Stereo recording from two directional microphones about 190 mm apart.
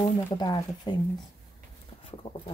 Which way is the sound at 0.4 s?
20° left (ahead or behind).